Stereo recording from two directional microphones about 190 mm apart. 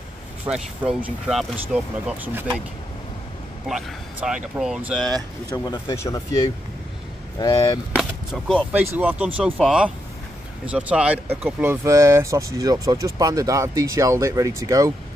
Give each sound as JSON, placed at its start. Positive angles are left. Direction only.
{"t": 0.5, "sound": "speech", "side_deg": -5}
{"t": 3.6, "sound": "speech", "side_deg": -5}
{"t": 5.7, "sound": "speech", "side_deg": 15}
{"t": 7.9, "sound": "speech", "side_deg": 0}